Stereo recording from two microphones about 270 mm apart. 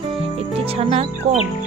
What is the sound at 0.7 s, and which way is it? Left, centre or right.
Speech, right.